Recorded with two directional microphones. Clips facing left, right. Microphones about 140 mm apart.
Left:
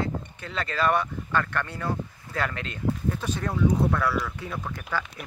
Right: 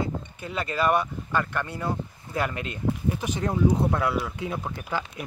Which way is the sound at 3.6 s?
25° right (ahead or behind).